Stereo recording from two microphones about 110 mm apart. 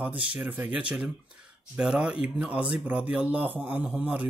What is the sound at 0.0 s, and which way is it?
Speech, 10° right (ahead or behind).